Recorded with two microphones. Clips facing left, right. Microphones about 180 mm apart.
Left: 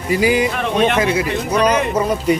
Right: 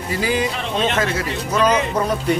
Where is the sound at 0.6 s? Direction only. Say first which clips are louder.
Left 5 dB; 55° left (ahead or behind).